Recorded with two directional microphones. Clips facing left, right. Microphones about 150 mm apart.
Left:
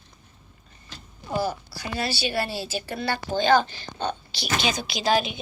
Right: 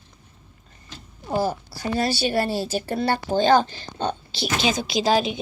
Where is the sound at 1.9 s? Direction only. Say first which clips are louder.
Right 5 dB; 45° right (ahead or behind).